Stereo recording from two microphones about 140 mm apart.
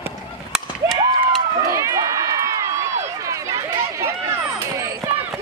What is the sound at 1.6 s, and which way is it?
Run, 20° right (ahead or behind).